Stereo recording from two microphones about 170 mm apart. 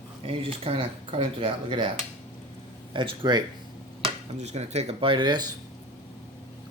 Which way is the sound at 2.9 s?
30° right (ahead or behind).